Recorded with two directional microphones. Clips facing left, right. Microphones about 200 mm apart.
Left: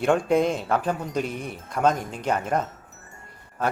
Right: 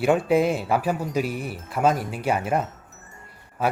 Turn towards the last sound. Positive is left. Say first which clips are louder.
# right 2 dB
turn(degrees=-10)  # may be behind; listen again after turning